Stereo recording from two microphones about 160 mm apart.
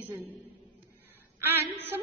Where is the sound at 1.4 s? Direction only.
15° right (ahead or behind).